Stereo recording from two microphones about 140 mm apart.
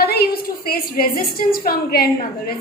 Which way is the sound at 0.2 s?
90° left.